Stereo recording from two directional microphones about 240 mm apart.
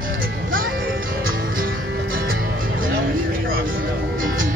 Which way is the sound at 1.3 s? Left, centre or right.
Right.